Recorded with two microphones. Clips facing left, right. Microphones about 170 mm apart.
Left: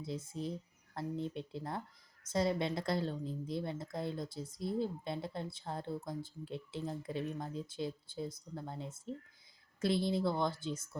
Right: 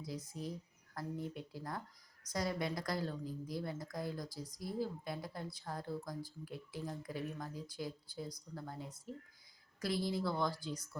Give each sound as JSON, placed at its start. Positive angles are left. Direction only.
{"t": 0.0, "sound": "a woman's voice", "side_deg": 25}